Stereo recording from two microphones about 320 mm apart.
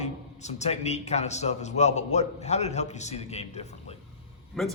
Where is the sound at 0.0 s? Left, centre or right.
Left.